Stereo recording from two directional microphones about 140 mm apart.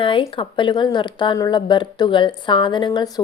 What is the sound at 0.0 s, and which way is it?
A woman's voice, 35° left (ahead or behind).